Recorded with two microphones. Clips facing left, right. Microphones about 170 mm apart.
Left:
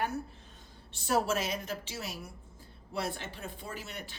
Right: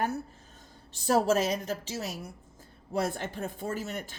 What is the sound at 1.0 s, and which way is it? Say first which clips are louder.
A woman's voice: right 5 dB; 35° right (ahead or behind).